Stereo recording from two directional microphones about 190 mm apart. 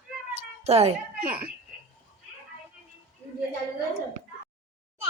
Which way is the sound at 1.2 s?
50° right (ahead or behind).